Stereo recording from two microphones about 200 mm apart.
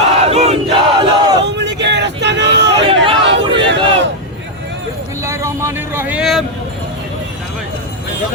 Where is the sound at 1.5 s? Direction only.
60° right (ahead or behind).